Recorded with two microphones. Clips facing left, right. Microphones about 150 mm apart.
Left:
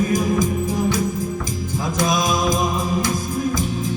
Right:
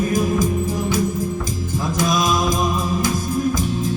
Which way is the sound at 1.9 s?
20° left (ahead or behind).